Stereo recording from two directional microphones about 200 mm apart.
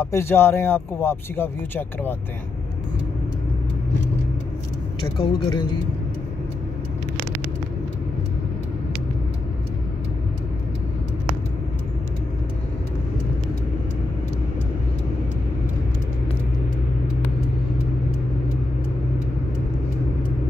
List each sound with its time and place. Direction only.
0.0 s speech: 15° left (ahead or behind)
5.2 s a man's voice: 25° left (ahead or behind)